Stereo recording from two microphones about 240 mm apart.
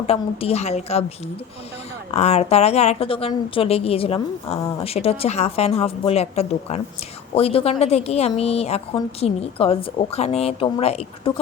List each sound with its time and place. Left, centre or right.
0.1 s a woman's voice: left
2.1 s a woman's voice: left